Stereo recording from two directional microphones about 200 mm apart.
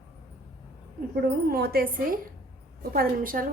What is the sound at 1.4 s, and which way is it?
A woman's voice, 50° right (ahead or behind).